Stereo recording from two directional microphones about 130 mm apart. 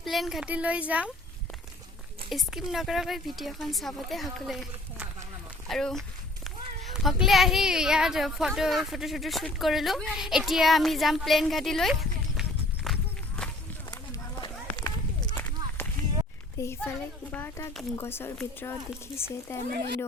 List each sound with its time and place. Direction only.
0.0 s speech: centre (ahead or behind)
2.3 s a woman's voice: 5° right (ahead or behind)
13.9 s run: 30° left (ahead or behind)
15.8 s a sound: 20° left (ahead or behind)
16.6 s speech: 20° left (ahead or behind)